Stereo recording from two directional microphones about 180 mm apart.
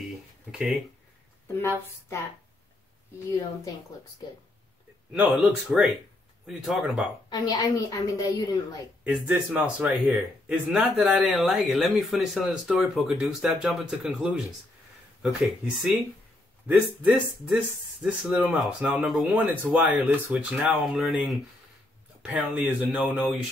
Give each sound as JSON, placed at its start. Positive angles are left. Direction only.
{"t": 0.0, "sound": "a sound", "side_deg": 0}
{"t": 5.1, "sound": "speech", "side_deg": -5}
{"t": 7.2, "sound": "a woman's voice", "side_deg": 20}
{"t": 9.0, "sound": "speech", "side_deg": -5}
{"t": 15.4, "sound": "speech", "side_deg": 0}